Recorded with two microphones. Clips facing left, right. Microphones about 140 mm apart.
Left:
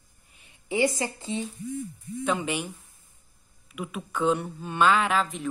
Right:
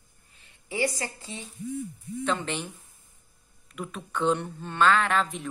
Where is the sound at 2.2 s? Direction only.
10° left (ahead or behind).